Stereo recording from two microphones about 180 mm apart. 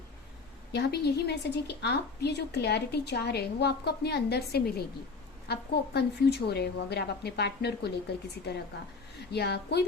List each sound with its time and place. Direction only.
0.7 s a woman's voice: 65° left (ahead or behind)